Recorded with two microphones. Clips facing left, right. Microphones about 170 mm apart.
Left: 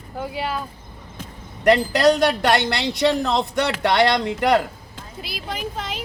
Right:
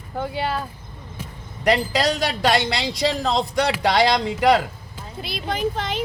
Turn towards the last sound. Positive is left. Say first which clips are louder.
# right 5 dB
turn(degrees=5)  # may be behind; listen again after turning